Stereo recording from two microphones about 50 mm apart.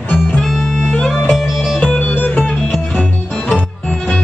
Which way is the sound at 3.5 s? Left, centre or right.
Left.